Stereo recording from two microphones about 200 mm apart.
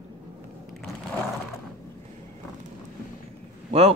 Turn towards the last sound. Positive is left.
turn(degrees=-30)  # may be behind; listen again after turning